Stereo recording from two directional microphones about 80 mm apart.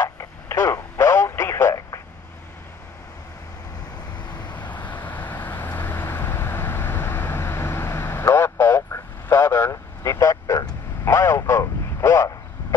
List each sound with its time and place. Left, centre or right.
0.0 s radio: left
4.5 s vehicle: centre; by 10.7 s left
11.1 s vehicle: left